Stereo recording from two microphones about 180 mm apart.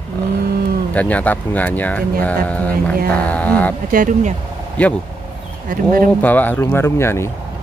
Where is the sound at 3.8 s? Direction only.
45° right (ahead or behind).